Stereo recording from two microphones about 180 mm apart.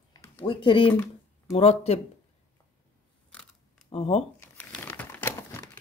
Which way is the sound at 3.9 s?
35° left (ahead or behind).